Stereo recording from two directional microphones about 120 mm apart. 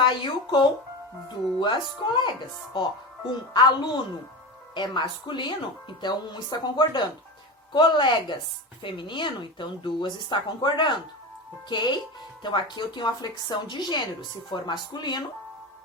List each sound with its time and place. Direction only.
0.0 s a woman's voice: 40° left (ahead or behind)